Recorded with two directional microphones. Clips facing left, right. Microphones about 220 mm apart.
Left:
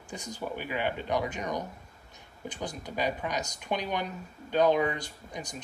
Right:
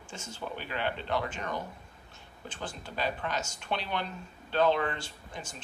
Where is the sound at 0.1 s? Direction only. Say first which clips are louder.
Left 4 dB; 15° left (ahead or behind).